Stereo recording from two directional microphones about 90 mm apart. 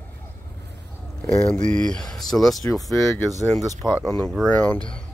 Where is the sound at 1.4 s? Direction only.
10° left (ahead or behind).